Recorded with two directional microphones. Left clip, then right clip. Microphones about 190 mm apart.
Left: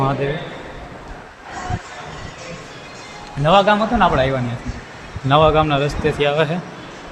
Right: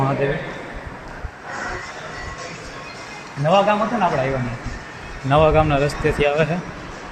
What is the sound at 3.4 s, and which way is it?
Speech, 25° left (ahead or behind).